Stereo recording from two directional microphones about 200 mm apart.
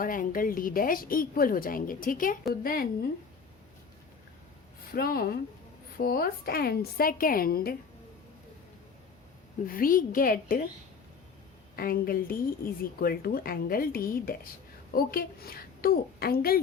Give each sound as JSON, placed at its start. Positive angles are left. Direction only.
{"t": 0.0, "sound": "a woman's voice", "side_deg": 45}
{"t": 4.9, "sound": "a woman's voice", "side_deg": 50}
{"t": 9.6, "sound": "a woman's voice", "side_deg": 45}
{"t": 11.8, "sound": "a woman's voice", "side_deg": 45}